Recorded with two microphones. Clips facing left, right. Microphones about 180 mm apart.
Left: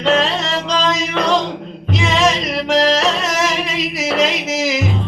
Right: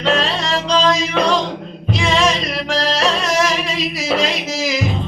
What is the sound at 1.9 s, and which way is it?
Music, 20° left (ahead or behind).